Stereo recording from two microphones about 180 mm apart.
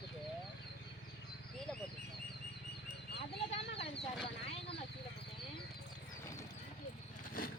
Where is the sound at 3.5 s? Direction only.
35° left (ahead or behind).